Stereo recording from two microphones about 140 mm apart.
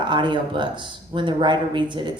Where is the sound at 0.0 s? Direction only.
35° right (ahead or behind).